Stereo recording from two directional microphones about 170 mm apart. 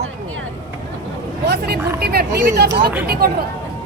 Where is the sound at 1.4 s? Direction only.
70° right (ahead or behind).